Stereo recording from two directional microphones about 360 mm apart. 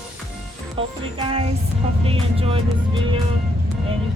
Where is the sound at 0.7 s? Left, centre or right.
Centre.